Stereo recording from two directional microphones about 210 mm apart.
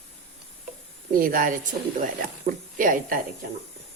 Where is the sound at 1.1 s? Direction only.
40° right (ahead or behind).